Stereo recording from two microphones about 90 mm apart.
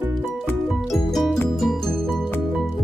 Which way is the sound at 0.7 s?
Centre (ahead or behind).